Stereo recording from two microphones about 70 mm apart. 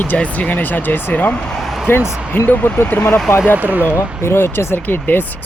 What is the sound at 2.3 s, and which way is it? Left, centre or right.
Speech, left.